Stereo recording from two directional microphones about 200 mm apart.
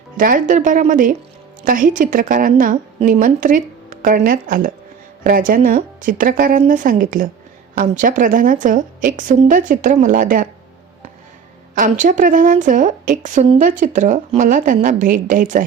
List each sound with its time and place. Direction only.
0.2 s a woman's voice: 40° right (ahead or behind)
11.7 s a woman's voice: 40° right (ahead or behind)